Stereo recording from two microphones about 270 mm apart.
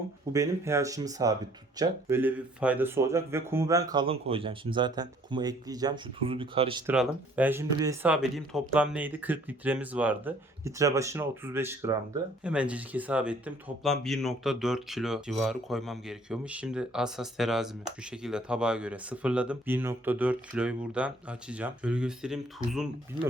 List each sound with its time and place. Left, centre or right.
0.3 s speech: centre
6.8 s speech: centre